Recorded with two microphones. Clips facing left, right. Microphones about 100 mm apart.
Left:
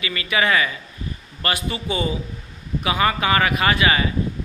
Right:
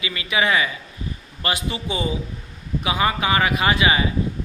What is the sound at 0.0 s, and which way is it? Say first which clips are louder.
Speech: left 1 dB; 20° right (ahead or behind).